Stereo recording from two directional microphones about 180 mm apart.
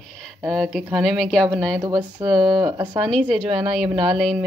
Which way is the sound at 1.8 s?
20° right (ahead or behind).